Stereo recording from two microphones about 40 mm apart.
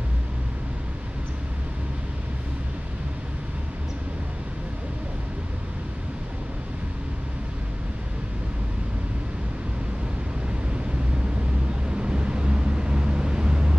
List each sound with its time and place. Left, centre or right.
11.9 s vehicle: right